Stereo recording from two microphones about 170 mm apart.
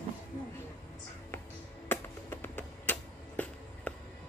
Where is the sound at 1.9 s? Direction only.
10° left (ahead or behind).